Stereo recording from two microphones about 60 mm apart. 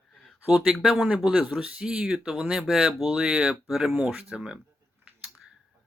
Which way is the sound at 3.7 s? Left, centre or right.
Centre.